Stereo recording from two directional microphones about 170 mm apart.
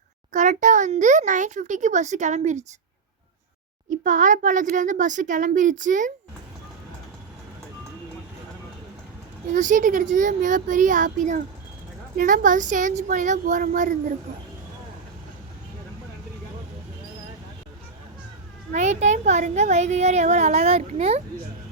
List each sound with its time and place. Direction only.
0.3 s a child's voice: 45° right (ahead or behind)
3.8 s a child's voice: 50° right (ahead or behind)
9.5 s a child's voice: 50° right (ahead or behind)
18.7 s speech: 45° right (ahead or behind)